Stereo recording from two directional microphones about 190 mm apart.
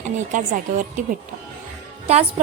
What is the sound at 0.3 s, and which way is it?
Speech, 40° right (ahead or behind).